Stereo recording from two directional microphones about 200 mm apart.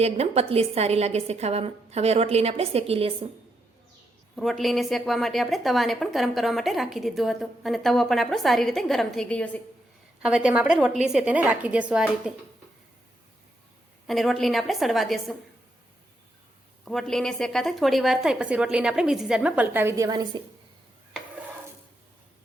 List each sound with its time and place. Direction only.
0.0 s a woman's voice: 30° right (ahead or behind)
4.4 s a woman's voice: centre (ahead or behind)
10.2 s a woman's voice: 5° right (ahead or behind)
14.1 s a woman's voice: centre (ahead or behind)
16.8 s a woman's voice: centre (ahead or behind); by 20.4 s 20° right (ahead or behind)